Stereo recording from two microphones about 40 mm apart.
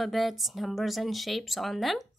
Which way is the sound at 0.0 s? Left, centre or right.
Centre.